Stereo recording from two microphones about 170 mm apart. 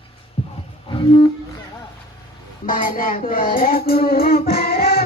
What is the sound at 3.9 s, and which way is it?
Music, 60° left (ahead or behind).